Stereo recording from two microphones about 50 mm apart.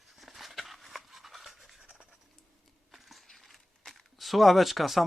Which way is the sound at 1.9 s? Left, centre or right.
Centre.